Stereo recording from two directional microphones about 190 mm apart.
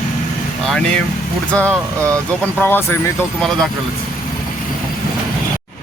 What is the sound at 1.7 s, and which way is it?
Speech, 15° right (ahead or behind).